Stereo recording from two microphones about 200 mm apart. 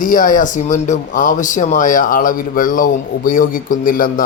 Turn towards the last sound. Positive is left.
turn(degrees=45)  # may be behind; listen again after turning